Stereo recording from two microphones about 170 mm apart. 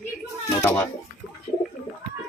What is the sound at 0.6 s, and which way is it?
Speech, 15° left (ahead or behind).